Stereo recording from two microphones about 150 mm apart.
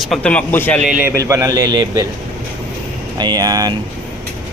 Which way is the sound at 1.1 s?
20° right (ahead or behind).